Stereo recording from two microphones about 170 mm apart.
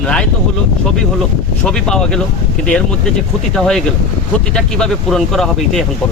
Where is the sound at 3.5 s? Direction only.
5° left (ahead or behind).